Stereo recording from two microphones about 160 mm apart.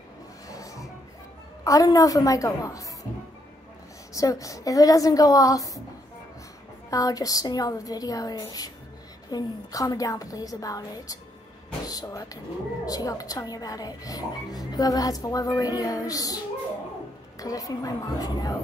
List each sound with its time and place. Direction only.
0.5 s a sound: 20° left (ahead or behind)
1.6 s a woman's voice: 20° left (ahead or behind)
4.1 s a woman's voice: 20° left (ahead or behind)
6.9 s a woman's voice: 20° left (ahead or behind)
17.4 s a woman's voice: 20° left (ahead or behind)